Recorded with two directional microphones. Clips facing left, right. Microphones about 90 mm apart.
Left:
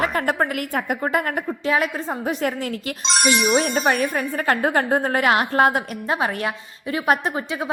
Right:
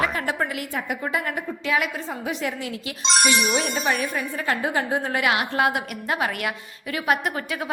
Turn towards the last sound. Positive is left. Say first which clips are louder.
# left 3 dB
turn(degrees=25)  # may be behind; listen again after turning